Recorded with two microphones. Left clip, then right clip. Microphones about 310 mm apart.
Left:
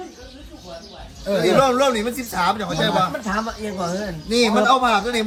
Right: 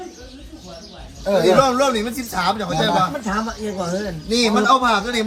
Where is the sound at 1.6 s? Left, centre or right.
Centre.